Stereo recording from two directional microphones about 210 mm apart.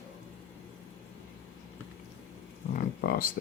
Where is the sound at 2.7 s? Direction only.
45° left (ahead or behind).